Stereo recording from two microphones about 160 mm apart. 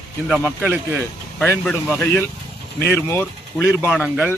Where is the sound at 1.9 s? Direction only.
10° left (ahead or behind).